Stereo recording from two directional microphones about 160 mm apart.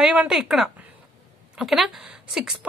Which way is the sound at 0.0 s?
5° right (ahead or behind).